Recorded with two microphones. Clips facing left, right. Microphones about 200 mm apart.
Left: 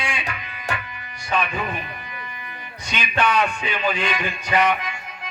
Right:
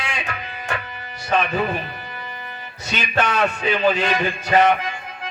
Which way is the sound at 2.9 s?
40° right (ahead or behind).